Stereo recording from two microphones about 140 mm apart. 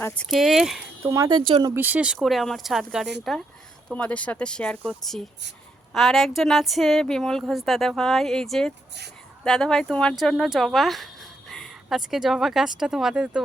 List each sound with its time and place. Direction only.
0.2 s a woman's voice: centre (ahead or behind)
1.0 s speech: 20° right (ahead or behind)
1.3 s speech: 35° right (ahead or behind)
1.7 s a woman's voice: 15° right (ahead or behind)